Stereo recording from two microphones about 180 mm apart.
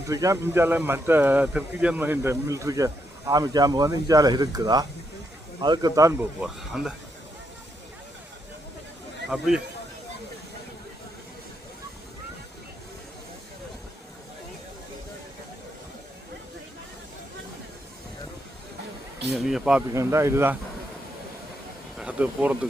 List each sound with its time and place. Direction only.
0.1 s speech: 20° right (ahead or behind)
6.4 s speech: 5° right (ahead or behind)
19.3 s speech: 5° right (ahead or behind)
19.9 s speech: 15° right (ahead or behind)
21.9 s speech: 5° right (ahead or behind)